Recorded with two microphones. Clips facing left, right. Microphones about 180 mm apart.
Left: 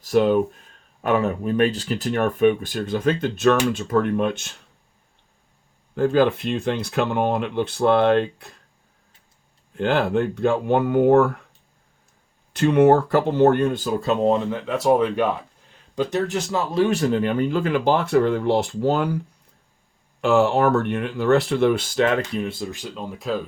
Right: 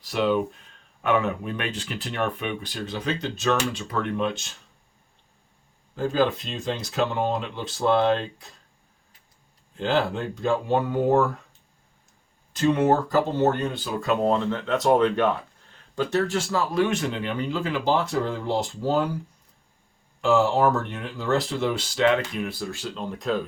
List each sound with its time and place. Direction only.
0.0 s speech: 45° left (ahead or behind)
5.9 s speech: 60° left (ahead or behind)
9.7 s speech: 55° left (ahead or behind)
12.5 s speech: 60° left (ahead or behind)
14.0 s speech: 25° left (ahead or behind)
14.3 s speech: 10° left (ahead or behind)
16.9 s speech: 40° left (ahead or behind); by 19.0 s 65° left (ahead or behind)
20.2 s speech: 60° left (ahead or behind)
22.4 s speech: 25° left (ahead or behind); by 23.4 s 5° left (ahead or behind)